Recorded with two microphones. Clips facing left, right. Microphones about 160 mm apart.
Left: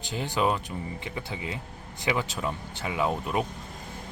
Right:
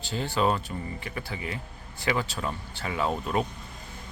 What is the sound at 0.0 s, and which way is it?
Speech, 15° left (ahead or behind).